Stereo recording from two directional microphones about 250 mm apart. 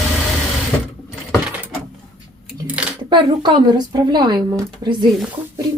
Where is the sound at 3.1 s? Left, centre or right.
Centre.